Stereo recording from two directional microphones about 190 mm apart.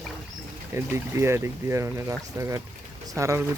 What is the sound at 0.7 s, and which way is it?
Speech, 15° right (ahead or behind).